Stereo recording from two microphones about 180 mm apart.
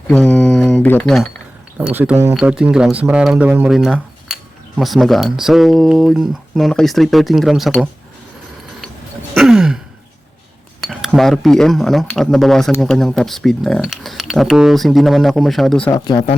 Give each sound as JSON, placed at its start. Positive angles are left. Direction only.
{"t": 0.1, "sound": "speech", "side_deg": 5}
{"t": 1.8, "sound": "speech", "side_deg": -10}
{"t": 9.3, "sound": "sigh", "side_deg": 0}
{"t": 10.8, "sound": "speech", "side_deg": 0}
{"t": 15.9, "sound": "speech", "side_deg": 20}